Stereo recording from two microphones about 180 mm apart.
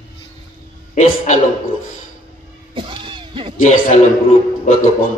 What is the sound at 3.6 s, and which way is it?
A man's voice, 45° left (ahead or behind).